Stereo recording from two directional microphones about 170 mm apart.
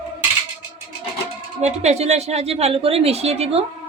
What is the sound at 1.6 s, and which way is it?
A woman's voice, 40° right (ahead or behind).